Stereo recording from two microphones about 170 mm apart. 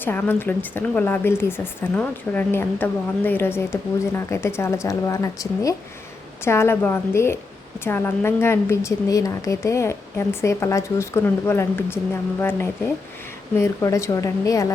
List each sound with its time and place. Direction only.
0.0 s a woman's voice: 10° left (ahead or behind)